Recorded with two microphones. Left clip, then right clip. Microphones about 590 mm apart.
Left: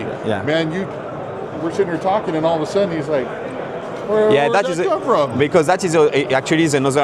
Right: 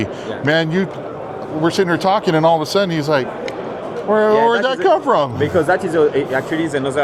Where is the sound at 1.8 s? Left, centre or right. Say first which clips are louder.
Right 1 dB; right.